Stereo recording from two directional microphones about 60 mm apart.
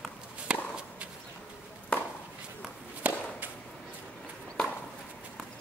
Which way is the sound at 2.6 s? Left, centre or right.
Right.